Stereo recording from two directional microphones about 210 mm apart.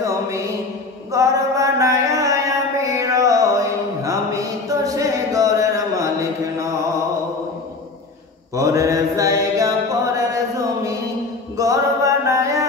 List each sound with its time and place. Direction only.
1.1 s mantra: 15° right (ahead or behind)
8.5 s mantra: 15° right (ahead or behind)
11.5 s music: 15° right (ahead or behind)